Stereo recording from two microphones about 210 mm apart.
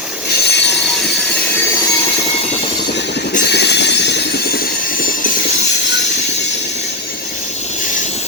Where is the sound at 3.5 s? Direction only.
55° left (ahead or behind).